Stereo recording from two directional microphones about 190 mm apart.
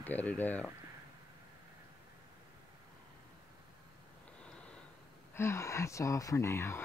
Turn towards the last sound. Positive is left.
turn(degrees=15)  # may be behind; listen again after turning